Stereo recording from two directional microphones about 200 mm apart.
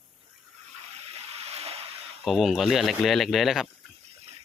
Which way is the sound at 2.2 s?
Centre (ahead or behind).